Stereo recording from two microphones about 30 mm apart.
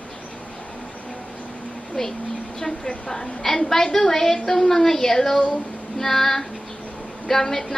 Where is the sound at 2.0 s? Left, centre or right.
Centre.